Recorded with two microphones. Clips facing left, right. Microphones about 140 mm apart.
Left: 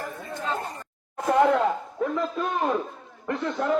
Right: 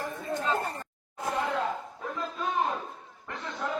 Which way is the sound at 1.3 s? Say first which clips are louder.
Left 10 dB; 75° left (ahead or behind).